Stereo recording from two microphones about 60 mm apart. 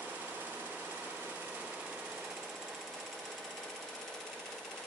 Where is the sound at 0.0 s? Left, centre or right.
Right.